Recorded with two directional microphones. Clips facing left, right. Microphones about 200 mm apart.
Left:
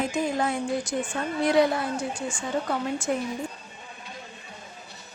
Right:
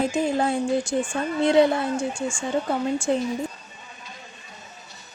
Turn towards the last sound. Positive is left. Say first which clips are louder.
# right 4 dB
turn(degrees=-30)  # may be behind; listen again after turning